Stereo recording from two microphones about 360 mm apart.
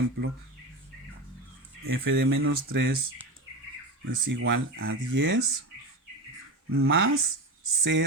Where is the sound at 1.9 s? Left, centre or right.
Right.